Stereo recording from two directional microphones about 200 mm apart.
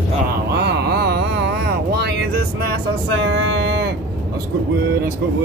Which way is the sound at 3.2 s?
65° right (ahead or behind).